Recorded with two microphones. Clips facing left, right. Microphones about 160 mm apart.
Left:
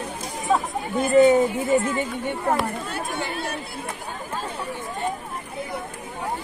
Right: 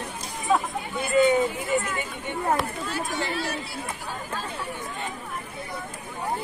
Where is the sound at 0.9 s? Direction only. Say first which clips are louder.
Left 5 dB; 40° left (ahead or behind).